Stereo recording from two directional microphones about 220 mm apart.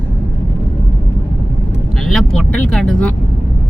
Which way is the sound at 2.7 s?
5° left (ahead or behind).